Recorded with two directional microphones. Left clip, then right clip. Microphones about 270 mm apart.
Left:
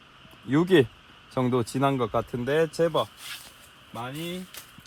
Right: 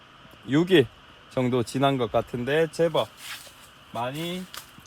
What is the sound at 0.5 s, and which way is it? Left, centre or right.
Speech, centre.